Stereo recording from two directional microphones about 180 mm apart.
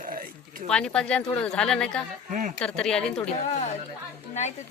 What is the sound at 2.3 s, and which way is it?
Speech, 45° right (ahead or behind).